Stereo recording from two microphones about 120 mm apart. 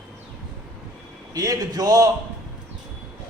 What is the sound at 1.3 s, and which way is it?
Speech, 30° right (ahead or behind).